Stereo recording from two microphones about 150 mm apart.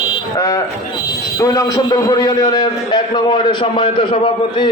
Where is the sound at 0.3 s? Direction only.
20° left (ahead or behind).